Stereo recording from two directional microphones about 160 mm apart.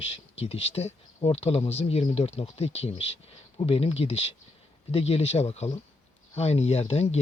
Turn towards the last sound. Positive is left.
turn(degrees=40)  # may be behind; listen again after turning